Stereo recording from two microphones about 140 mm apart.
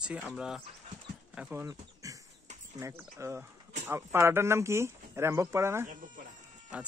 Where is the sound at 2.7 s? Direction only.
20° right (ahead or behind).